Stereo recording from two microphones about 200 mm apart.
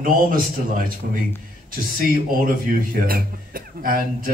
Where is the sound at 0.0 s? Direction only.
45° right (ahead or behind).